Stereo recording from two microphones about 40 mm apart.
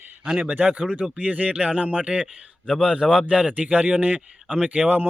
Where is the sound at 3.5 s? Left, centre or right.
Right.